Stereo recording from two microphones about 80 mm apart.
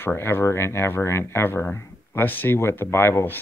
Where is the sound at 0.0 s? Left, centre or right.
Left.